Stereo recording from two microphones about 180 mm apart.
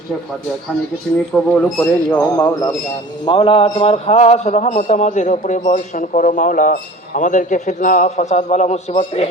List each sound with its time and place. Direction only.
1.3 s speech: 5° left (ahead or behind)
2.3 s speech: 20° left (ahead or behind)
3.2 s a man's voice: 30° left (ahead or behind)